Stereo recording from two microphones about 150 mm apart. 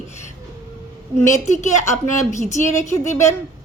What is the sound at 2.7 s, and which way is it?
Speech, 20° left (ahead or behind).